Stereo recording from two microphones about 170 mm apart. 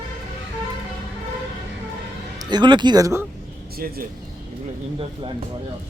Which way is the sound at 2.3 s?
25° right (ahead or behind).